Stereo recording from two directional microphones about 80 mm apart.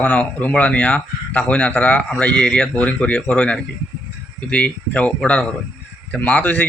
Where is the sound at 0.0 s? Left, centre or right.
Centre.